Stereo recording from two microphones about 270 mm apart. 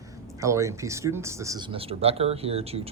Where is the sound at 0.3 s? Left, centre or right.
Centre.